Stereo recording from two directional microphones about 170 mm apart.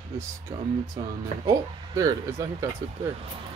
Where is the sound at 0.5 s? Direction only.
20° right (ahead or behind).